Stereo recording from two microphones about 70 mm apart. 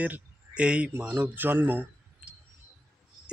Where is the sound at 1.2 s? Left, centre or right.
Right.